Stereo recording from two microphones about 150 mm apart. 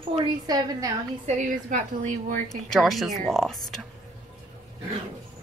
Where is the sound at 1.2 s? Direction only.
60° right (ahead or behind).